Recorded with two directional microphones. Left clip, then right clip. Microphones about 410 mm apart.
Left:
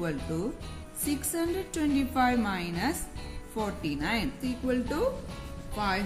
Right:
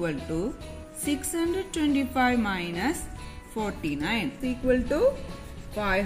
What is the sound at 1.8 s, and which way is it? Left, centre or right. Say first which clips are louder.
A woman's voice: right 2 dB; centre.